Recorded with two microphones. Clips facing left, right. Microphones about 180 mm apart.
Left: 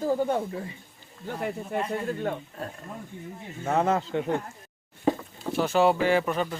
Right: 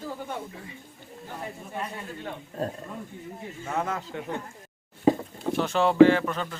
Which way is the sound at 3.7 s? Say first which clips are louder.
Left 7 dB; 30° left (ahead or behind).